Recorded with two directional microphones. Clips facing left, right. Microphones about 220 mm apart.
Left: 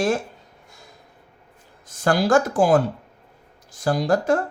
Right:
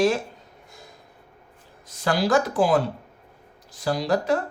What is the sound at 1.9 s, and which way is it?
Speech, 50° left (ahead or behind).